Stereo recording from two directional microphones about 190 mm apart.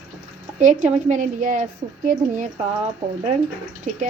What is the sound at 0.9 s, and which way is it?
A woman's voice, 40° right (ahead or behind).